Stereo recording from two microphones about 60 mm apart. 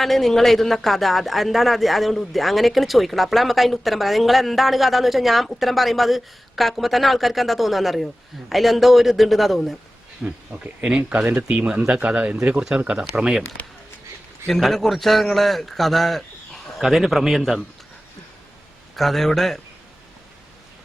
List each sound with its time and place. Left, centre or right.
0.0 s speech: centre
10.2 s speech: right
11.4 s speech: centre
14.4 s speech: centre
18.9 s speech: centre